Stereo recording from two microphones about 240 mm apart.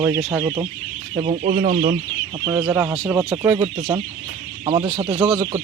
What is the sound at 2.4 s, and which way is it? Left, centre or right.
Speech, centre.